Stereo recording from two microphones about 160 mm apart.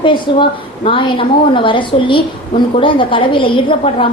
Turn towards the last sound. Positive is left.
turn(degrees=35)  # may be behind; listen again after turning